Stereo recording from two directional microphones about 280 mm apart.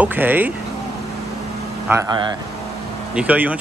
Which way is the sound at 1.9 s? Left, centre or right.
Centre.